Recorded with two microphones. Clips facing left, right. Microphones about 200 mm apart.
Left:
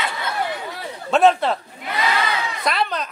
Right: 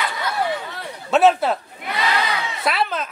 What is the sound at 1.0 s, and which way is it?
Speech, 5° right (ahead or behind).